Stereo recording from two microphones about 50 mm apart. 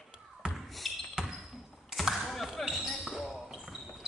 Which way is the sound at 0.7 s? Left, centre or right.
Centre.